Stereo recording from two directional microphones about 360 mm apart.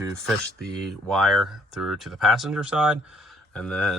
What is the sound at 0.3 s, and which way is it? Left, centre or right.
Speech, centre.